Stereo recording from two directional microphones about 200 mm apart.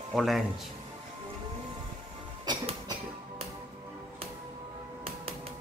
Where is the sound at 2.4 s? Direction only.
20° right (ahead or behind).